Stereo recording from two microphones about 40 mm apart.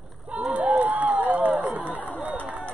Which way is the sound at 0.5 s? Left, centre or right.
Right.